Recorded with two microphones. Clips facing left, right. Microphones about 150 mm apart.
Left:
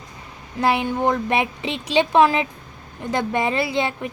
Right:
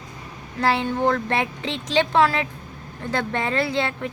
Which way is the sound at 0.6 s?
15° left (ahead or behind).